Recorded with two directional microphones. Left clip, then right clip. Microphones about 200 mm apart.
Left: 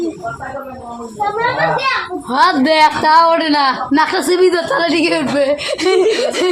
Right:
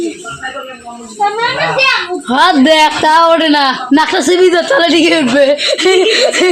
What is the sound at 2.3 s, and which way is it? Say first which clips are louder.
A man's voice: right 4 dB; 40° right (ahead or behind).